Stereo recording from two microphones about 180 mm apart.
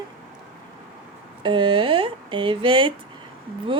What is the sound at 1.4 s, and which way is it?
Speech, 30° right (ahead or behind).